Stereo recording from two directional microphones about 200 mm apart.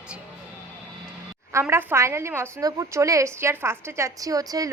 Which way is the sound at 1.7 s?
10° right (ahead or behind).